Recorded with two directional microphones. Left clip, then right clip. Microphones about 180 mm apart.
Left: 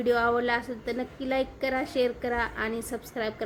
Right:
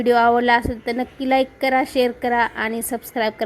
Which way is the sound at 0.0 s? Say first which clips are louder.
Right 9 dB; 35° right (ahead or behind).